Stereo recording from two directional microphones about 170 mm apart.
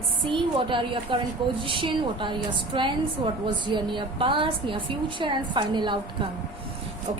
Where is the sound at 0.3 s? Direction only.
30° right (ahead or behind).